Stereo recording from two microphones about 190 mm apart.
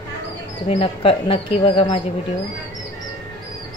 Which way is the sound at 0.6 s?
30° left (ahead or behind).